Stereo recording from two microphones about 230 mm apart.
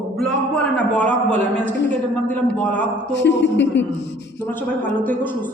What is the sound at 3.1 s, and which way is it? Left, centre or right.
Speech, left.